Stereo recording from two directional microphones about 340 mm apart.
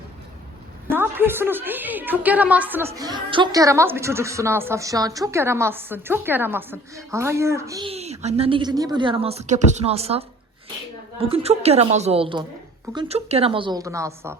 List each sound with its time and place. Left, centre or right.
0.9 s a woman's voice: centre